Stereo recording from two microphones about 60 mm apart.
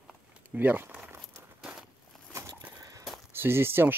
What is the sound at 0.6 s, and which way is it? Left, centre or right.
Speech, right.